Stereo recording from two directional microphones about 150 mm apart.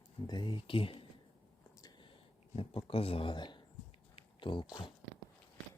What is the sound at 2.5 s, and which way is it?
Speech, 40° left (ahead or behind).